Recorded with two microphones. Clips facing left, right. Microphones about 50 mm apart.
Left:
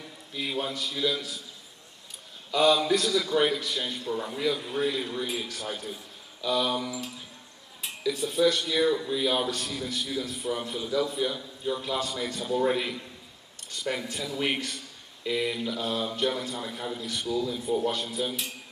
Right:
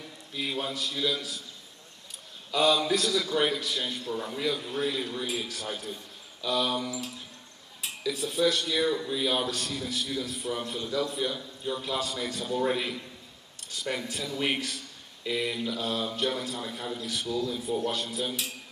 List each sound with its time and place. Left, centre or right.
0.0 s a man's voice: centre
2.5 s speech: centre